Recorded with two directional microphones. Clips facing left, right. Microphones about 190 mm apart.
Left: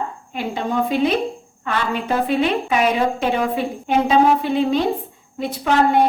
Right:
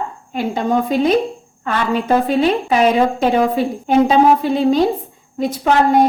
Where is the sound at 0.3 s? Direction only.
40° right (ahead or behind).